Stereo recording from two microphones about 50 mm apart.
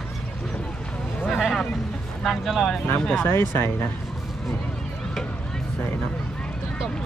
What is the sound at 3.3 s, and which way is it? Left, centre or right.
Speech, left.